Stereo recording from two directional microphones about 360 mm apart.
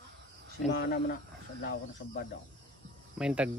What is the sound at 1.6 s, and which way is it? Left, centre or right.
Speech, left.